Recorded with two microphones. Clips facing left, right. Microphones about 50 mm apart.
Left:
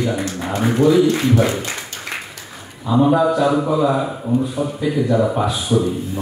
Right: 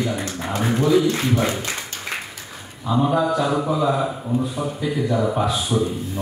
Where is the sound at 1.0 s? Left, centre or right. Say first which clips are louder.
Left 4 dB; left.